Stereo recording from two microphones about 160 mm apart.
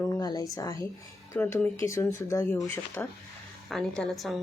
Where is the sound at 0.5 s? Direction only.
20° left (ahead or behind).